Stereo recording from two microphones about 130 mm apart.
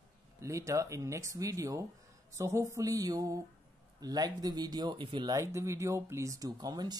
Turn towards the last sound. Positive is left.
turn(degrees=-30)  # may be behind; listen again after turning